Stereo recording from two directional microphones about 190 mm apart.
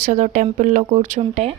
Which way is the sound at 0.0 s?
40° right (ahead or behind).